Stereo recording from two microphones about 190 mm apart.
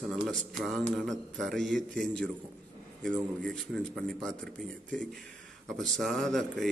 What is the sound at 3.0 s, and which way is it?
Speech, 5° left (ahead or behind).